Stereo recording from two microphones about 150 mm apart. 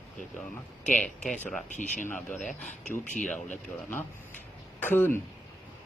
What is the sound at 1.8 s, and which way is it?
Speech, 55° left (ahead or behind).